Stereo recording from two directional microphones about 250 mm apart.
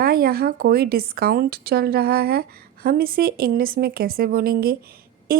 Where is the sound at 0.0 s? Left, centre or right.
Right.